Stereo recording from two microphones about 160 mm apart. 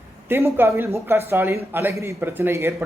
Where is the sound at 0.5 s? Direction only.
15° right (ahead or behind).